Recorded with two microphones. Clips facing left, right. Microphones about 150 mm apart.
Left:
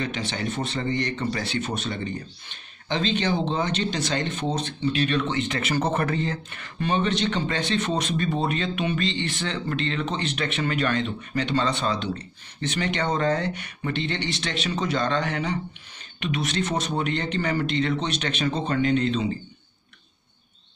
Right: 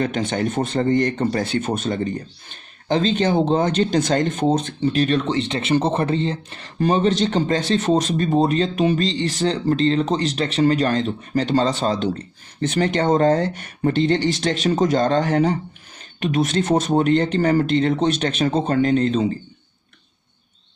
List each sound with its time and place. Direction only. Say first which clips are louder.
0.0 s speech: right 7 dB; 50° right (ahead or behind)